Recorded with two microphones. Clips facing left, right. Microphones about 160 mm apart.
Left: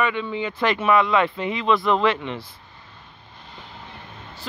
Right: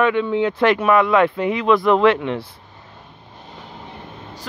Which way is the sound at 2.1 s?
65° right (ahead or behind).